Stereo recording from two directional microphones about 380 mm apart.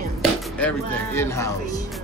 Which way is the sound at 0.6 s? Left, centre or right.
Centre.